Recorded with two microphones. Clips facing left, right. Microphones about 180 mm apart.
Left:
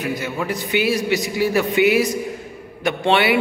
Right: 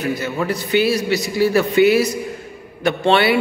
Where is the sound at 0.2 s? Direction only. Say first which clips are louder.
Right 2 dB; 15° left (ahead or behind).